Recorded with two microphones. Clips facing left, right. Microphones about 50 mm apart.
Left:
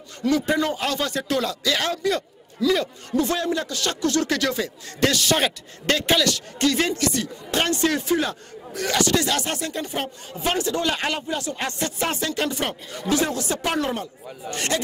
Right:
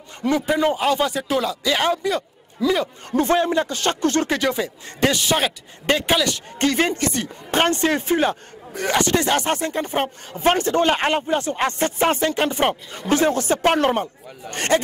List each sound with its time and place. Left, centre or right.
0.2 s a man's voice: right
2.6 s a man's voice: right
6.3 s speech: right
14.5 s speech: right